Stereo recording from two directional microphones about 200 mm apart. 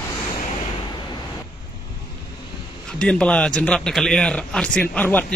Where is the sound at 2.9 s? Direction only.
5° left (ahead or behind).